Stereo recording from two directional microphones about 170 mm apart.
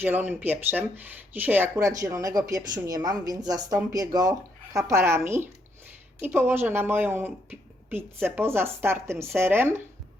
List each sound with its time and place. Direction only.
0.0 s speech: 10° right (ahead or behind)